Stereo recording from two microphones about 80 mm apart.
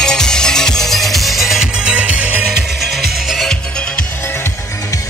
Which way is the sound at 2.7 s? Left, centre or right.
Centre.